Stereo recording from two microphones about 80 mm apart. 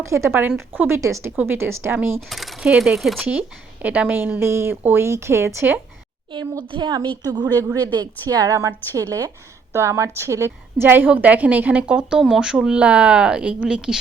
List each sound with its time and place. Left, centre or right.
0.0 s a woman's voice: right
2.3 s speech: centre
3.2 s a woman's voice: right
6.7 s a woman's voice: right; by 14.0 s centre